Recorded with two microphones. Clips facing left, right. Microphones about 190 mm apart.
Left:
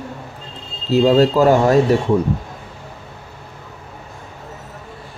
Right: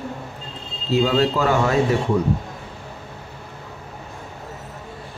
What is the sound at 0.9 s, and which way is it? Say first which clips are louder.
Speech: left 6 dB; 40° left (ahead or behind).